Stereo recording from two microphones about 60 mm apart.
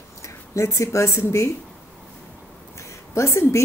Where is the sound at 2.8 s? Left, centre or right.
Left.